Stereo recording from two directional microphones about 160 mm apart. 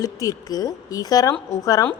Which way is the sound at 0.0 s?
20° left (ahead or behind).